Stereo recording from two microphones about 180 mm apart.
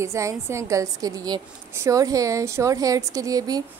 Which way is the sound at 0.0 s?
15° right (ahead or behind).